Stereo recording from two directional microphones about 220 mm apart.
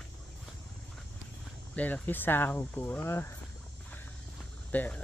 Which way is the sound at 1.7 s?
5° left (ahead or behind).